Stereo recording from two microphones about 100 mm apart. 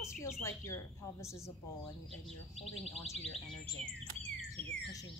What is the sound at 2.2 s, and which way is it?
Speech, centre (ahead or behind).